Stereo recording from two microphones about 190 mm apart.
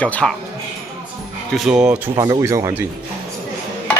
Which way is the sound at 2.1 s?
15° right (ahead or behind).